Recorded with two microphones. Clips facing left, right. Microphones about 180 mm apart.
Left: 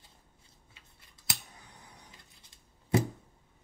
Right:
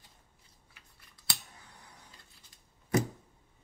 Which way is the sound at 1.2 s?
20° left (ahead or behind).